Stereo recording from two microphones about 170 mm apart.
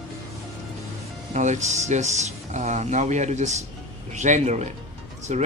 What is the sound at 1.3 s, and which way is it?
Speech, 45° right (ahead or behind).